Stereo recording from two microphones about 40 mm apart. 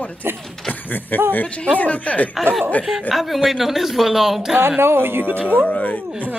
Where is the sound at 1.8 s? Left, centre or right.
Left.